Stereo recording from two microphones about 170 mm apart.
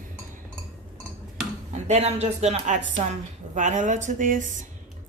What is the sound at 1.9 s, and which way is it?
Speech, 40° right (ahead or behind).